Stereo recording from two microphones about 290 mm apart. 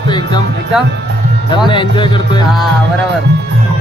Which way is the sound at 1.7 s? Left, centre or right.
Centre.